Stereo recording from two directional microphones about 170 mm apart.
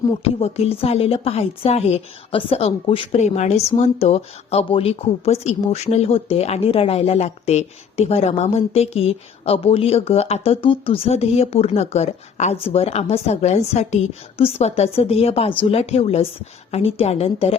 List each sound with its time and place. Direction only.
0.3 s a woman's voice: 35° left (ahead or behind)